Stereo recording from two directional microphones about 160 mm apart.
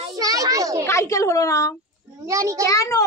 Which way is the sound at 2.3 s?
20° right (ahead or behind).